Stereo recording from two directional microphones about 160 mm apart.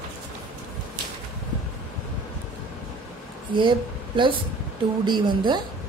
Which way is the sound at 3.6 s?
30° right (ahead or behind).